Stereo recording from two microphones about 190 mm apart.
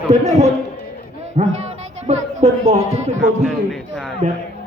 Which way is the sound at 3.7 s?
5° left (ahead or behind).